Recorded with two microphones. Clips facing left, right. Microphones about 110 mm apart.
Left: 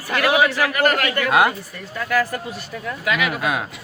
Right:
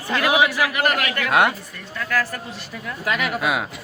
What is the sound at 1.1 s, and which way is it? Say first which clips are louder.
Speech: even; centre (ahead or behind).